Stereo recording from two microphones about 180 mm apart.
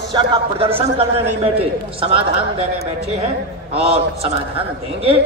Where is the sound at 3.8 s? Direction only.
35° right (ahead or behind).